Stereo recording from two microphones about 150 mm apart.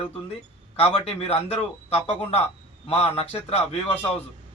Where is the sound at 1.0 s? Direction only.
40° left (ahead or behind).